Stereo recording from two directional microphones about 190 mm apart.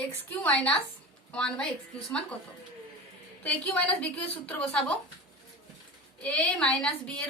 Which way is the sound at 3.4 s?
5° left (ahead or behind).